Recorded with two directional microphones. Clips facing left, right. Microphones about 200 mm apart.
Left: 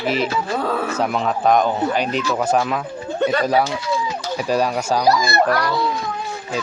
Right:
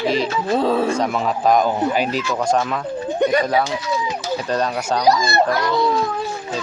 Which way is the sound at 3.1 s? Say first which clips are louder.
Right 2 dB; 15° right (ahead or behind).